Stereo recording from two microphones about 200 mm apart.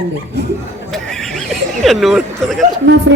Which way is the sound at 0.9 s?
Centre (ahead or behind).